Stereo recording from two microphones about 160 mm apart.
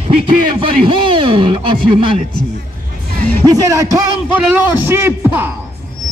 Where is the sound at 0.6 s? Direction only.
30° right (ahead or behind).